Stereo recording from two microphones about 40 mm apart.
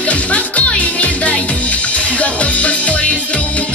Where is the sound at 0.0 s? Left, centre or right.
Left.